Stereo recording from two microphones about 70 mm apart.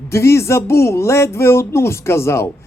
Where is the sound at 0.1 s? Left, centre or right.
Left.